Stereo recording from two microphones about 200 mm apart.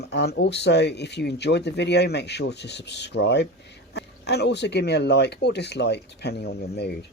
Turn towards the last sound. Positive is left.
turn(degrees=55)  # may be behind; listen again after turning